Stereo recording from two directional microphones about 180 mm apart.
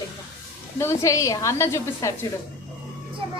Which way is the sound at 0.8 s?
15° left (ahead or behind).